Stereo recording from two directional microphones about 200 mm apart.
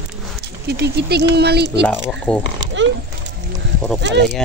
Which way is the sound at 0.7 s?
55° right (ahead or behind).